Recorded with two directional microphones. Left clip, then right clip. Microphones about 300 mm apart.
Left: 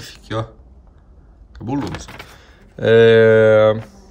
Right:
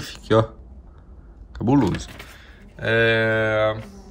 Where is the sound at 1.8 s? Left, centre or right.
Left.